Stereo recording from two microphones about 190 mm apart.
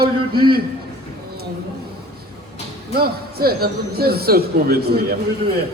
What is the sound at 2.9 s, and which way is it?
Speech, 55° right (ahead or behind).